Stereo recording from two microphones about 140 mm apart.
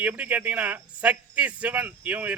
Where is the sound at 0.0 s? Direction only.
10° right (ahead or behind).